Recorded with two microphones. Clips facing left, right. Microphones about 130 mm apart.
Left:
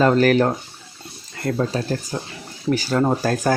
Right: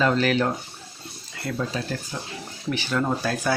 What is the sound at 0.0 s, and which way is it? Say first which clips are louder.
Speech: left 6 dB; 45° left (ahead or behind).